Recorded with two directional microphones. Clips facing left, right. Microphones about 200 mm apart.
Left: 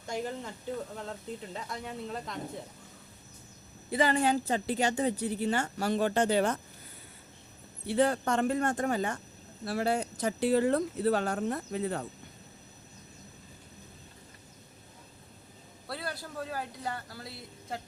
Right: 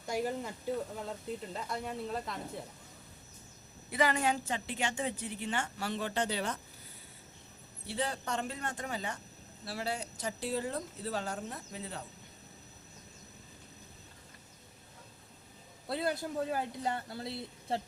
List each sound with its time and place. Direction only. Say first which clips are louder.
0.1 s speech: right 1 dB; 5° right (ahead or behind)
3.9 s speech: left 4 dB; 30° left (ahead or behind); by 6.6 s 50° left (ahead or behind)
7.9 s speech: left 9 dB; 55° left (ahead or behind)
15.9 s speech: right 5 dB; 20° right (ahead or behind)